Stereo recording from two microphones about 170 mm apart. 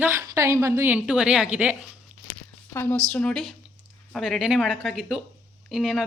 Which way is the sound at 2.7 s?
15° left (ahead or behind).